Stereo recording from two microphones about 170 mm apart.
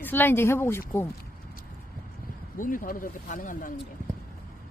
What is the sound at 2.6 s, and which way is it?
Speech, 55° left (ahead or behind).